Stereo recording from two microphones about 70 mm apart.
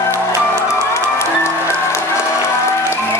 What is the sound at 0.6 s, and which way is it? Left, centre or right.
Music, left.